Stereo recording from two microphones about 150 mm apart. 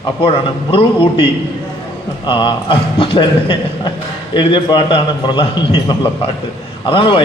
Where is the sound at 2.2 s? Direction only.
35° left (ahead or behind).